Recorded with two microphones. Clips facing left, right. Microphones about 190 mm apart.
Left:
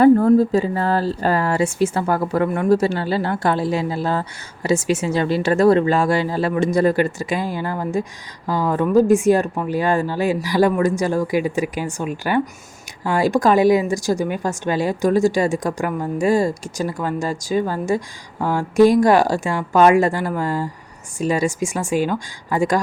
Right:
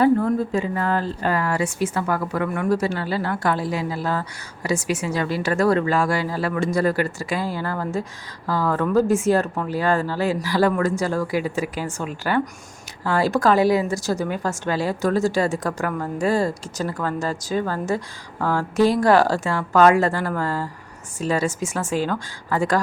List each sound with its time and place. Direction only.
0.0 s a woman's voice: 40° left (ahead or behind); by 22.8 s 15° left (ahead or behind)